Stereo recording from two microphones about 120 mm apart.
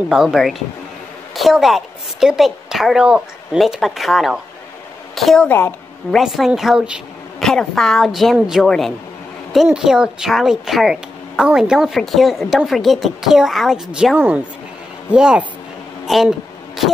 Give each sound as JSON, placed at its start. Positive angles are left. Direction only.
{"t": 0.1, "sound": "a woman's voice", "side_deg": -5}
{"t": 5.5, "sound": "a woman's voice", "side_deg": 20}
{"t": 6.1, "sound": "a woman's voice", "side_deg": 0}
{"t": 14.1, "sound": "speech", "side_deg": -15}
{"t": 16.1, "sound": "a sound", "side_deg": 0}